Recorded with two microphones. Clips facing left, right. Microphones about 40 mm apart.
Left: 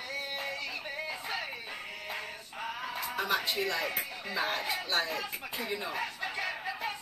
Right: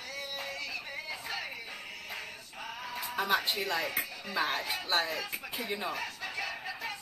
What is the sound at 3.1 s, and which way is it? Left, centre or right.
Music, centre.